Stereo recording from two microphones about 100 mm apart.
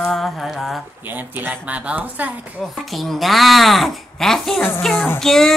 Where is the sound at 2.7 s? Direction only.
Centre (ahead or behind).